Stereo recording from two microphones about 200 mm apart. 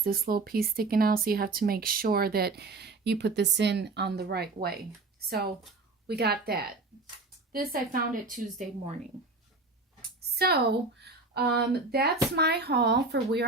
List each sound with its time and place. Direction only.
0.0 s speech: 45° right (ahead or behind)
10.3 s a woman's voice: 50° right (ahead or behind)